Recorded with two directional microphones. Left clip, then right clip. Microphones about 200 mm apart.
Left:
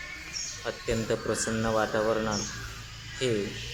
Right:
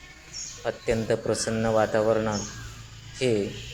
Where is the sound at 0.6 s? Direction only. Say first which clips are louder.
Right 5 dB; 10° right (ahead or behind).